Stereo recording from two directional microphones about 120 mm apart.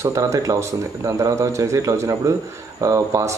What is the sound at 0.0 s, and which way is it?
Speech, 25° right (ahead or behind).